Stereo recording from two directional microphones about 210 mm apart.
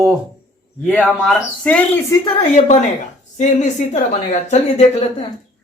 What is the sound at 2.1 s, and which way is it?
A woman's voice, 25° left (ahead or behind).